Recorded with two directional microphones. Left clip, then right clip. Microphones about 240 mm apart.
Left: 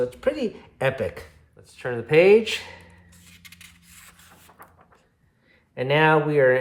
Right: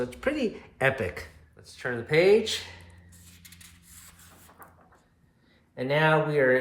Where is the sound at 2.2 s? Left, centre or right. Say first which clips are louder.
Left 5 dB; left.